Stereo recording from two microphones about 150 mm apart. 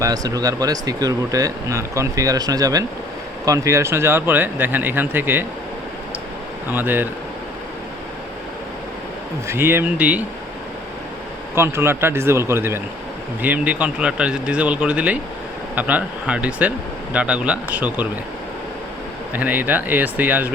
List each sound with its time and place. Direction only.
0.0 s speech: 25° right (ahead or behind)
6.7 s speech: 15° right (ahead or behind)
9.5 s speech: 15° right (ahead or behind)
11.5 s speech: 15° right (ahead or behind)
19.3 s speech: 10° right (ahead or behind)